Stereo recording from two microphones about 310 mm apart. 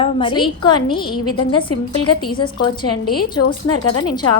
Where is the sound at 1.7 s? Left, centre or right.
Left.